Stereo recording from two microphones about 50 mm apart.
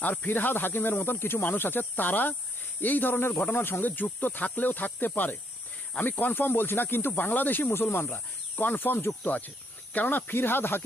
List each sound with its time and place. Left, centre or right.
0.0 s speech: left
9.2 s speech: left